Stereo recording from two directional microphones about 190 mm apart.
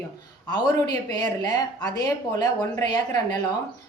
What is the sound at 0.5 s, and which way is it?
Speech, 20° left (ahead or behind).